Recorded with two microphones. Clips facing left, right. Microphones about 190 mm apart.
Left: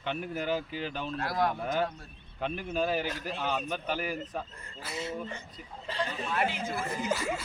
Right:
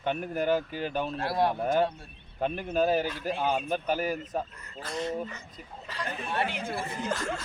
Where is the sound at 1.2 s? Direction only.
30° right (ahead or behind).